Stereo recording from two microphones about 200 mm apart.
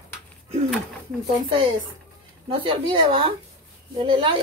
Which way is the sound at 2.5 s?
25° right (ahead or behind).